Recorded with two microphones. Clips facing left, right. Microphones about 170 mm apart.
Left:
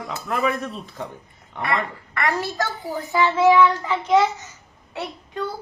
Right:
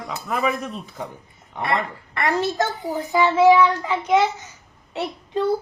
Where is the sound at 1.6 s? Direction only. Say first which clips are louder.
Right 1 dB; 25° right (ahead or behind).